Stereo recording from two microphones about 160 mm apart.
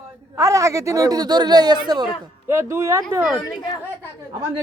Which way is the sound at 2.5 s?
15° right (ahead or behind).